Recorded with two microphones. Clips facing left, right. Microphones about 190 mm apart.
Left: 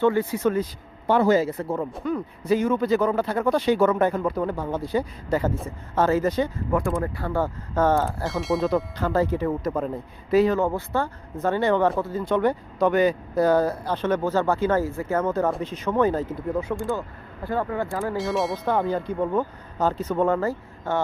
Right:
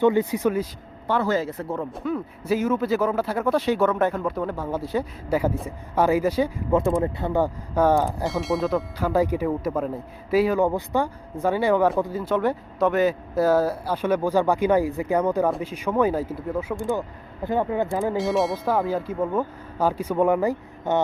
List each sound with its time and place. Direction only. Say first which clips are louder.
0.0 s speech: right 1 dB; 20° right (ahead or behind)
1.0 s speech: left 4 dB; 15° left (ahead or behind)
1.5 s speech: left 2 dB; centre (ahead or behind)
6.7 s speech: right 3 dB; 20° right (ahead or behind)
8.2 s speech: even; centre (ahead or behind)
17.4 s speech: right 3 dB; 20° right (ahead or behind)
18.2 s speech: right 1 dB; centre (ahead or behind); by 21.0 s 15° right (ahead or behind)